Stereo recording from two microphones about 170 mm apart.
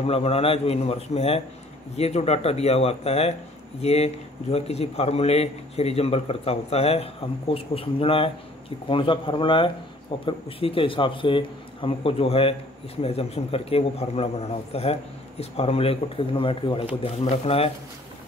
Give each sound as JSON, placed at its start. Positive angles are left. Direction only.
{"t": 0.0, "sound": "a man's voice", "side_deg": 35}